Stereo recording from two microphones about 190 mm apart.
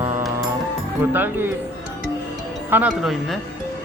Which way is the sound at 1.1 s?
10° right (ahead or behind).